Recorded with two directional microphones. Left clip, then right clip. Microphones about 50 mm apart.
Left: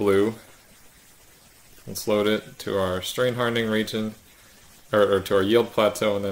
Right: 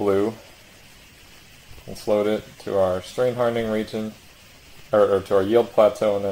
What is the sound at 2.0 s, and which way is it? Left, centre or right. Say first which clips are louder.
Speech: right 1 dB; left.